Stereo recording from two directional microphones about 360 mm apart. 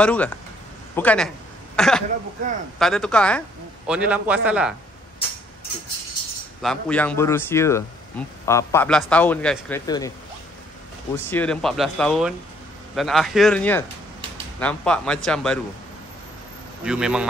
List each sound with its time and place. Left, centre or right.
0.0 s a man's voice: centre
6.6 s a man's voice: centre
11.2 s a man's voice: centre
16.8 s a man's voice: centre